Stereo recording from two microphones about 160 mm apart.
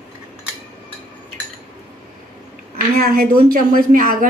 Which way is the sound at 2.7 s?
65° right (ahead or behind).